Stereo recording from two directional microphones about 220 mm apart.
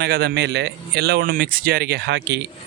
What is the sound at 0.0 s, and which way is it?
Speech, 45° right (ahead or behind).